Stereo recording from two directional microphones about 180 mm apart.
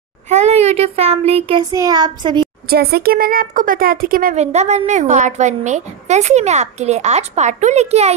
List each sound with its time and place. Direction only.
0.3 s speech: 40° right (ahead or behind)
2.7 s speech: 60° right (ahead or behind); by 8.1 s 35° right (ahead or behind)